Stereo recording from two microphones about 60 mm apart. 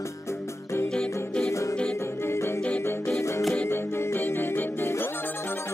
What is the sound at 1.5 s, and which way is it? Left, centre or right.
Music, left.